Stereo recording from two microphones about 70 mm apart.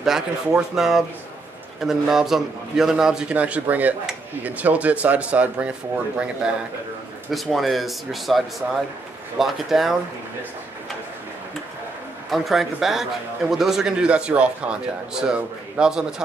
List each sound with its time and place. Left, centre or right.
0.0 s speech: centre
3.3 s speech: centre
7.5 s speech: centre
12.3 s speech: centre